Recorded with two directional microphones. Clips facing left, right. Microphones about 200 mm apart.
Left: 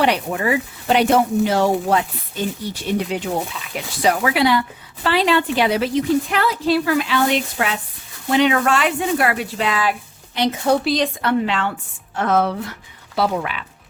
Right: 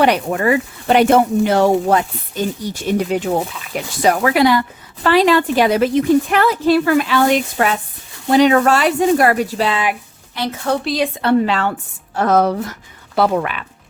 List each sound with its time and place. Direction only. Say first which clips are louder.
0.0 s speech: right 4 dB; 50° right (ahead or behind); by 9.8 s 35° right (ahead or behind)
10.3 s a woman's voice: left 2 dB; 20° left (ahead or behind)
10.8 s a woman's voice: even; 5° right (ahead or behind)
11.2 s speech: right 4 dB; 35° right (ahead or behind)
13.1 s speech: right 4 dB; 55° right (ahead or behind)